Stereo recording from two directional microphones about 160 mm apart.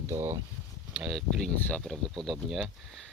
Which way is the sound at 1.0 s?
Centre (ahead or behind).